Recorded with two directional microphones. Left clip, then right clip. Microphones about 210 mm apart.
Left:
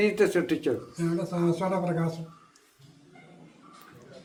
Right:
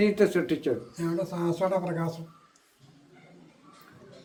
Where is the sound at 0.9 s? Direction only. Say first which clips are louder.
Even; 20° right (ahead or behind).